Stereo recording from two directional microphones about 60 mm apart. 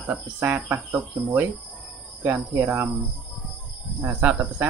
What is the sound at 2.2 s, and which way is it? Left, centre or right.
Speech, right.